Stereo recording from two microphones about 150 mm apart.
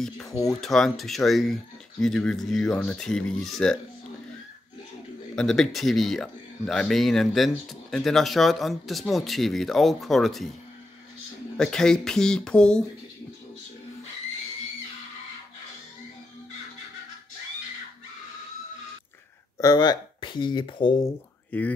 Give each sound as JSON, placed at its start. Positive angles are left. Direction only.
{"t": 0.3, "sound": "speech", "side_deg": 25}
{"t": 0.6, "sound": "speech", "side_deg": 0}
{"t": 5.3, "sound": "speech", "side_deg": 5}
{"t": 11.5, "sound": "speech", "side_deg": 5}
{"t": 19.6, "sound": "speech", "side_deg": 25}
{"t": 21.0, "sound": "speech", "side_deg": 10}